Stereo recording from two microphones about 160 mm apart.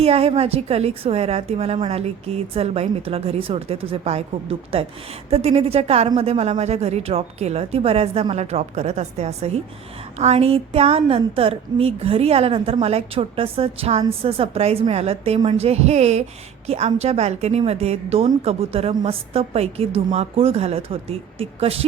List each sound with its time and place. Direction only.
0.0 s a woman's voice: 40° right (ahead or behind)